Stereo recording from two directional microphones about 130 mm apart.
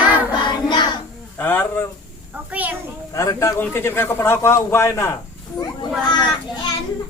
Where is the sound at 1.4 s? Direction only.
15° left (ahead or behind).